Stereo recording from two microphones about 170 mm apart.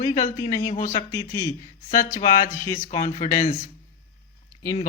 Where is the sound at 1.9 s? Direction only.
50° left (ahead or behind).